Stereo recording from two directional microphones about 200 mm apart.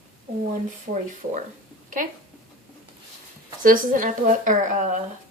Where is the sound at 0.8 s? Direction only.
40° right (ahead or behind).